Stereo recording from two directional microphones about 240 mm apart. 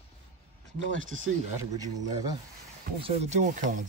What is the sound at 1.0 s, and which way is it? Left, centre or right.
Speech, right.